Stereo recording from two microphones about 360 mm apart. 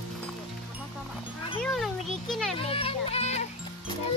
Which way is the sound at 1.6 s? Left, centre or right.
Centre.